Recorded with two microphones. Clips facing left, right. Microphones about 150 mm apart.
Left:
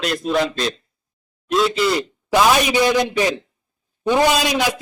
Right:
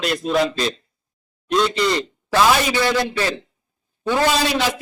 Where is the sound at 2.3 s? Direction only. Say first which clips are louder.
Left 1 dB; 15° left (ahead or behind).